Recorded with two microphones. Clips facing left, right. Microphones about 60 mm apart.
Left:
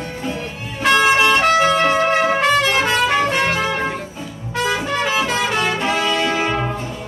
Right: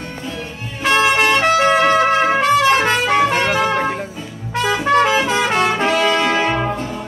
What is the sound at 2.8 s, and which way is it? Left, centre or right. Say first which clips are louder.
Trumpet: right 2 dB; right.